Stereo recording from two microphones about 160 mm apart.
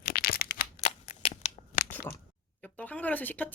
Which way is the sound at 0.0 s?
70° left (ahead or behind).